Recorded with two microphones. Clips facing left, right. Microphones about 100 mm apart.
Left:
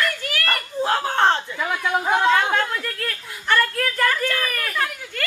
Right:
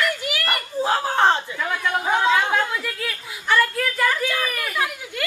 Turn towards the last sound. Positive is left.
turn(degrees=-5)  # may be behind; listen again after turning